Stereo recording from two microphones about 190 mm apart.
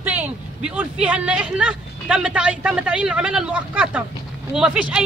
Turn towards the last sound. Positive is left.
turn(degrees=-5)  # may be behind; listen again after turning